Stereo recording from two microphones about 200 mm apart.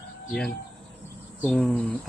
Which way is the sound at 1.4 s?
10° left (ahead or behind).